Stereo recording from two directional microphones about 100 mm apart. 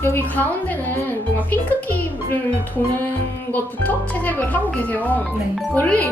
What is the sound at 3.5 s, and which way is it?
Speech, 15° left (ahead or behind).